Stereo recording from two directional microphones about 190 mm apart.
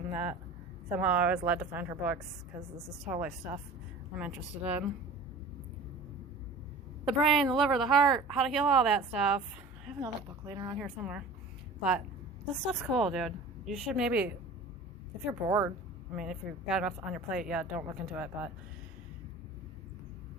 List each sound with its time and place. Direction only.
0.1 s speech: 10° right (ahead or behind)
7.0 s speech: centre (ahead or behind)
10.0 s a woman's voice: 20° right (ahead or behind)
10.8 s speech: 5° right (ahead or behind)
15.3 s speech: 15° right (ahead or behind)
16.1 s speech: 5° right (ahead or behind)